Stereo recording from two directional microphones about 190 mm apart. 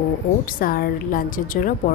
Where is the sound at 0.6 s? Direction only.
50° left (ahead or behind).